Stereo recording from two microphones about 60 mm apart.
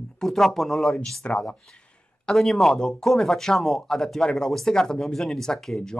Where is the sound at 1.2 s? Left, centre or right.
Centre.